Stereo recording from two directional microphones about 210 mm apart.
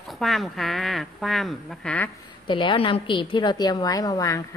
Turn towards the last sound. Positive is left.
turn(degrees=15)  # may be behind; listen again after turning